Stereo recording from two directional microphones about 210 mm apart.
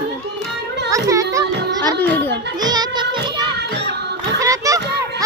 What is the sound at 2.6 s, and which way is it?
Music, 20° right (ahead or behind).